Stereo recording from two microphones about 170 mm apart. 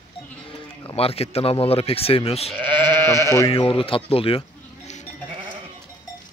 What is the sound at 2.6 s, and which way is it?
Sheep, 30° right (ahead or behind).